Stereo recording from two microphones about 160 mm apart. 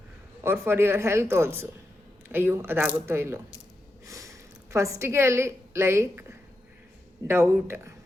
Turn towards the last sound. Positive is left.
turn(degrees=-15)  # may be behind; listen again after turning